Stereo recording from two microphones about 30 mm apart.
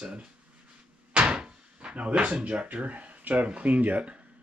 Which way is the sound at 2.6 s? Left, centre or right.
Right.